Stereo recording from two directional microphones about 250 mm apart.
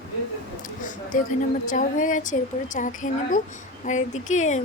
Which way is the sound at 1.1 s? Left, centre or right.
Left.